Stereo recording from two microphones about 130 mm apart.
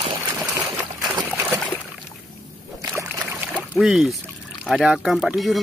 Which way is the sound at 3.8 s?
Centre (ahead or behind).